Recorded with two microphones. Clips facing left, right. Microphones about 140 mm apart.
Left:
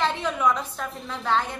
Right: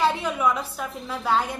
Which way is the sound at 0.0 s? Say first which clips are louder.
Right 1 dB; 10° right (ahead or behind).